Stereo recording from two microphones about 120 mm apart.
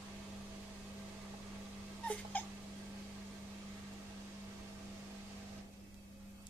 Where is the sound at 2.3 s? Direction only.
15° left (ahead or behind).